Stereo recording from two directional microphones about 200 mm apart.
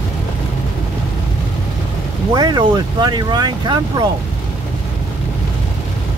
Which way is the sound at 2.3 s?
20° right (ahead or behind).